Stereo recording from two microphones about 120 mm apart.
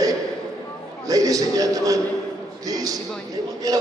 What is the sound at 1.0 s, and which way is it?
A man's voice, 30° right (ahead or behind).